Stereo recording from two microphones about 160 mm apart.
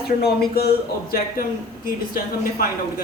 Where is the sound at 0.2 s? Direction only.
75° left (ahead or behind).